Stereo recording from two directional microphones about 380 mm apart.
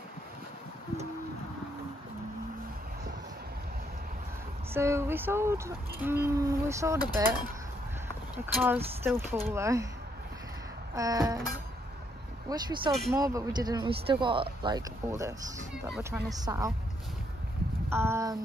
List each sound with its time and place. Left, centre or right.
4.7 s speech: centre
8.5 s speech: centre
11.0 s speech: centre
12.9 s speech: centre
13.2 s speech: centre
17.8 s speech: centre